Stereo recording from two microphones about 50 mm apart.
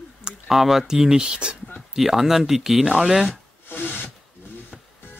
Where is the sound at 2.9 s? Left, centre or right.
Centre.